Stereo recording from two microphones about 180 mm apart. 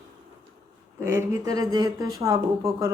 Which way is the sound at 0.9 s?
15° right (ahead or behind).